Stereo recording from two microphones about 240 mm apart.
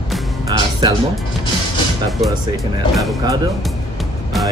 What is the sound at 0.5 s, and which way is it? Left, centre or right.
Music, centre.